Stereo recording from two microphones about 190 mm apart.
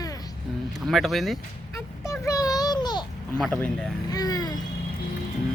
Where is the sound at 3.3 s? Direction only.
5° left (ahead or behind).